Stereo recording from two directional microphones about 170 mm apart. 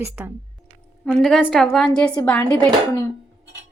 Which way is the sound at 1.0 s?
5° left (ahead or behind).